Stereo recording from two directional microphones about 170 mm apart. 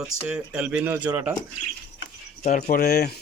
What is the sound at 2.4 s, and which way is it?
Speech, 45° left (ahead or behind).